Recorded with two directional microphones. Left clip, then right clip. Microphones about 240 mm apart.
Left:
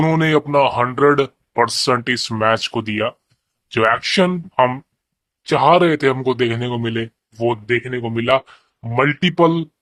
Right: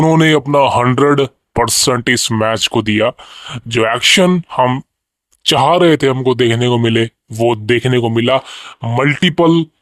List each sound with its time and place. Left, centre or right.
0.1 s speech: right
4.3 s speech: right
5.4 s speech: right
5.7 s speech: right
8.1 s speech: right